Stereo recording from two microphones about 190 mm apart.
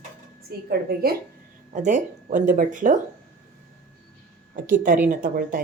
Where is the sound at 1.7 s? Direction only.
40° right (ahead or behind).